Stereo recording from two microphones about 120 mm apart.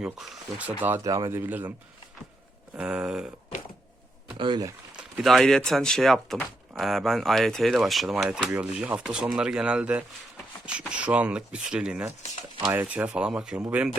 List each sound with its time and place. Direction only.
0.0 s speech: 10° right (ahead or behind)
1.0 s speech: 30° right (ahead or behind)
1.4 s speech: 15° right (ahead or behind)
2.7 s speech: 10° right (ahead or behind)
4.4 s speech: 40° right (ahead or behind)
4.9 s speech: centre (ahead or behind)